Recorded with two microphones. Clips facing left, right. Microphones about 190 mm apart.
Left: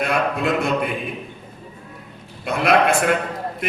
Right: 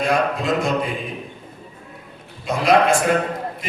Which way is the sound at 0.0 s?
60° left (ahead or behind).